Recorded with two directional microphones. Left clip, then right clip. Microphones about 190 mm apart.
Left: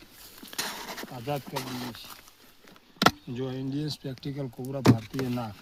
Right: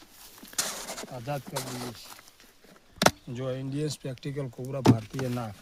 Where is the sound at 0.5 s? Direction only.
5° right (ahead or behind).